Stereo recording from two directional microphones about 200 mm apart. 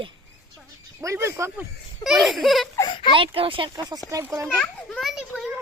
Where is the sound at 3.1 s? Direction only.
25° right (ahead or behind).